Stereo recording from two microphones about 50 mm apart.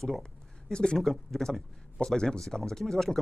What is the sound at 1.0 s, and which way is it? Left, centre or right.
Speech, centre.